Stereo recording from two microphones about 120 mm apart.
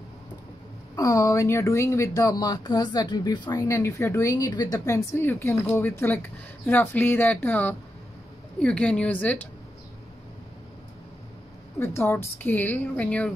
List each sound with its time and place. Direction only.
0.9 s speech: 30° left (ahead or behind)
3.6 s a woman's voice: 25° left (ahead or behind)
11.8 s a woman's voice: 20° left (ahead or behind)